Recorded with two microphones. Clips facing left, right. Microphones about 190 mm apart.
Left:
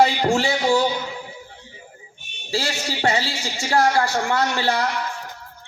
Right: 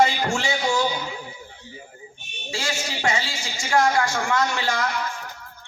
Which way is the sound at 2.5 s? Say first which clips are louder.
Left 4 dB; 35° left (ahead or behind).